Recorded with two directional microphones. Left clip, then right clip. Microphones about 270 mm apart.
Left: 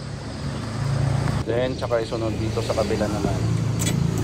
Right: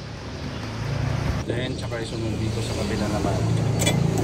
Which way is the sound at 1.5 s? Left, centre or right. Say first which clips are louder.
Left 7 dB; centre.